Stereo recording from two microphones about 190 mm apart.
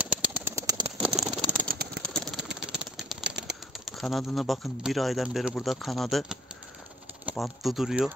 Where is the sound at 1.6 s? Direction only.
50° right (ahead or behind).